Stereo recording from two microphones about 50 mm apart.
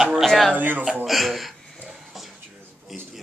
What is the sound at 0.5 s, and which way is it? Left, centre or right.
Speech, right.